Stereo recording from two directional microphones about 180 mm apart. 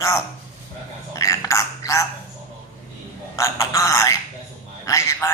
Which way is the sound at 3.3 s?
15° left (ahead or behind).